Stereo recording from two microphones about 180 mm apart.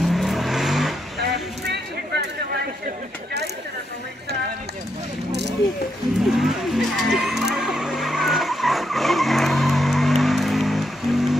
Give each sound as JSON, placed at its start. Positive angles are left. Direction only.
{"t": 0.0, "sound": "vehicle", "side_deg": 0}
{"t": 1.2, "sound": "a sound", "side_deg": -70}
{"t": 6.3, "sound": "vehicle", "side_deg": 0}